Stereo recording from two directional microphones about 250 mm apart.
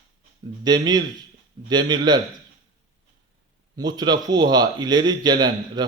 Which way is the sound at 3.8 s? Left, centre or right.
Centre.